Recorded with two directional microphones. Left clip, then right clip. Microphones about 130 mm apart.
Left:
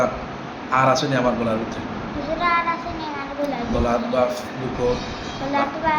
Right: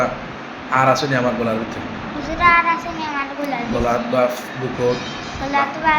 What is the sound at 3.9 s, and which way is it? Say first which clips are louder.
Speech: right 3 dB; 55° right (ahead or behind).